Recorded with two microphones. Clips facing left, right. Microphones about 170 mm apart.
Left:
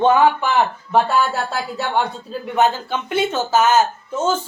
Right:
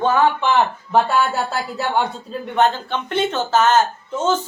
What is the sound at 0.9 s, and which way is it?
Speech, centre (ahead or behind).